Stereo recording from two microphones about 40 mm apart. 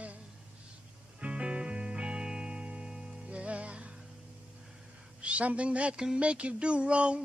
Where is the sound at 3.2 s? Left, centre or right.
Right.